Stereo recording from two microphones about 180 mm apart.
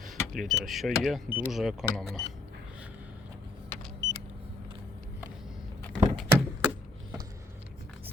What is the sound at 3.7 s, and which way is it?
Car, 15° left (ahead or behind).